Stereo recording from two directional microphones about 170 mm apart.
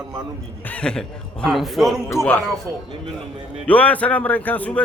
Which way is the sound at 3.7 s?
10° left (ahead or behind).